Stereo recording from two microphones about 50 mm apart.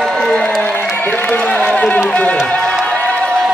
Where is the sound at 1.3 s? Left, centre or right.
Left.